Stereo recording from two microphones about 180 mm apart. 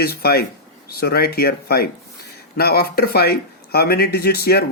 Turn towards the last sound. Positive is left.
turn(degrees=60)  # may be behind; listen again after turning